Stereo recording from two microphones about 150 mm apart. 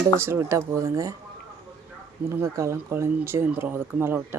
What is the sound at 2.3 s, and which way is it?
Speech, 20° right (ahead or behind).